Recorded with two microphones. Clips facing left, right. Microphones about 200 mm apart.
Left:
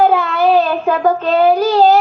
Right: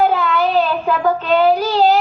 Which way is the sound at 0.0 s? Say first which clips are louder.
Left 3 dB; 40° left (ahead or behind).